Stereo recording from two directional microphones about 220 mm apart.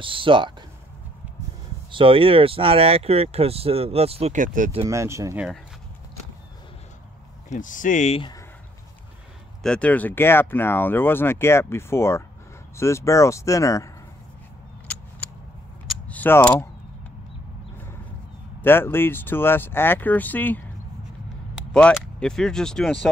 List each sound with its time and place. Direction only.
0.0 s speech: 25° right (ahead or behind)
1.9 s speech: 25° right (ahead or behind)
4.8 s speech: 15° right (ahead or behind)
7.4 s speech: 35° left (ahead or behind)
9.6 s speech: 5° left (ahead or behind)
14.9 s a sound: 5° left (ahead or behind)
18.6 s speech: 10° left (ahead or behind)